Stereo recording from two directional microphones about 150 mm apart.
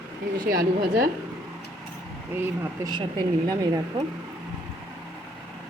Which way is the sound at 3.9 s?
30° right (ahead or behind).